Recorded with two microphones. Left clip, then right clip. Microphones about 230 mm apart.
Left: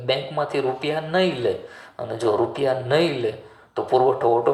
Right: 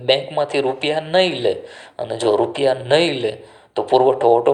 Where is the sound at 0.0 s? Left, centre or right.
Right.